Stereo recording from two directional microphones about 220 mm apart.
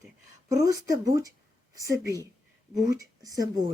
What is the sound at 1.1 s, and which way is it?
Speech, 15° right (ahead or behind).